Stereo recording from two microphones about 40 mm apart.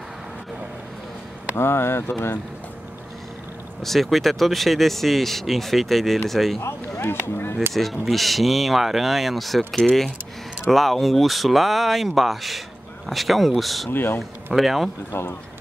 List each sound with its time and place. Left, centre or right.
1.6 s speech: left
3.8 s speech: centre
7.0 s speech: left
7.7 s speech: centre
13.8 s speech: left
14.5 s speech: centre
15.1 s speech: left